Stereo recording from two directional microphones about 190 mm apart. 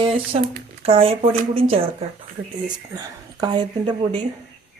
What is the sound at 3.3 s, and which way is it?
Speech, 25° right (ahead or behind).